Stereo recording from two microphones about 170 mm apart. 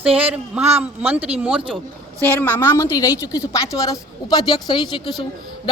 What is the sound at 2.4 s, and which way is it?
A woman's voice, 10° left (ahead or behind).